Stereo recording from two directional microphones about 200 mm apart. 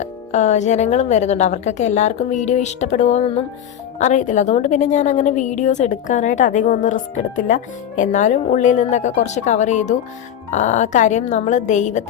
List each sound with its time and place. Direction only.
0.0 s a woman's voice: 35° left (ahead or behind)